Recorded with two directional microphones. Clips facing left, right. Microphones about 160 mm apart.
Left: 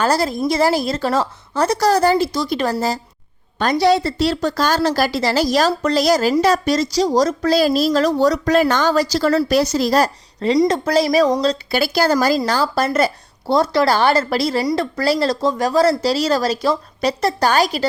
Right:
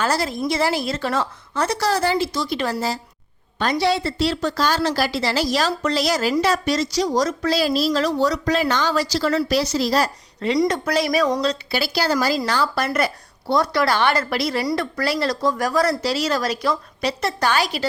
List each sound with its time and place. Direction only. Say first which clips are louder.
0.0 s a woman's voice: left 4 dB; 40° left (ahead or behind)
10.6 s speech: left 4 dB; 30° left (ahead or behind)
11.7 s a woman's voice: left 7 dB; 50° left (ahead or behind)
12.5 s speech: left 3 dB; 35° left (ahead or behind)